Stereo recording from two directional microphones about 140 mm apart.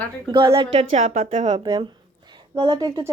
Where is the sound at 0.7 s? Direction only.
45° right (ahead or behind).